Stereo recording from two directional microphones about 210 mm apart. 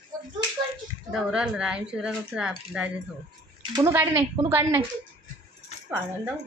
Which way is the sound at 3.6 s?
15° right (ahead or behind).